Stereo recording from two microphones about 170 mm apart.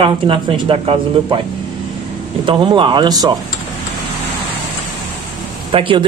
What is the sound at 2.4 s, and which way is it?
Speech, 30° right (ahead or behind).